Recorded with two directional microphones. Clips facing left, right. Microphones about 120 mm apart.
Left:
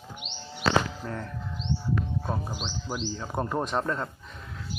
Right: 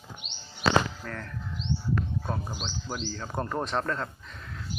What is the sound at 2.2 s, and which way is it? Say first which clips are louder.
Speech: left 2 dB; 10° left (ahead or behind).